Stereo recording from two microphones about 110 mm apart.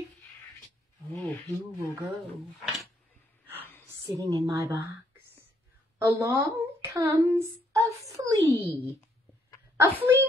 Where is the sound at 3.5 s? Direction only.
20° left (ahead or behind).